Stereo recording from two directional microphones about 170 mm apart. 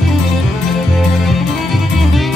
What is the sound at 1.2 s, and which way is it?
Music, centre (ahead or behind).